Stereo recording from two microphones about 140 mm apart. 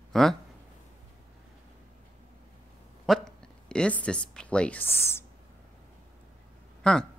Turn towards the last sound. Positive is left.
turn(degrees=5)  # may be behind; listen again after turning